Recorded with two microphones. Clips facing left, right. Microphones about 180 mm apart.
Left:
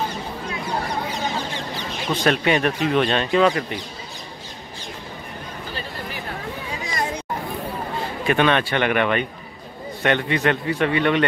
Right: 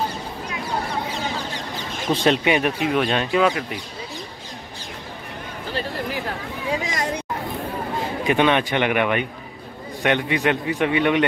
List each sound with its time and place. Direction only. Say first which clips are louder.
2.0 s speech: right 1 dB; 25° right (ahead or behind)
2.5 s speech: left 1 dB; 10° right (ahead or behind)
6.8 s a sound: even; 90° right
8.3 s speech: even; 15° right (ahead or behind)